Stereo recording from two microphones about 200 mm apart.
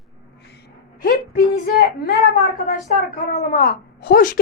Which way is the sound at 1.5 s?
50° left (ahead or behind).